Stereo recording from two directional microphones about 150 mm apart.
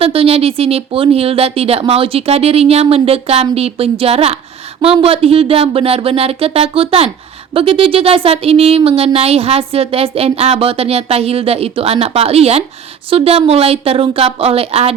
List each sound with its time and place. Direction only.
0.0 s speech: 40° right (ahead or behind)